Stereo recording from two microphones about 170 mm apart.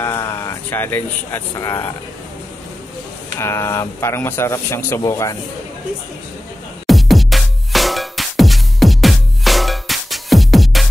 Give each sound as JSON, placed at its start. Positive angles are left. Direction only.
{"t": 0.0, "sound": "speech", "side_deg": 15}
{"t": 3.3, "sound": "speech", "side_deg": 15}
{"t": 6.9, "sound": "music", "side_deg": 0}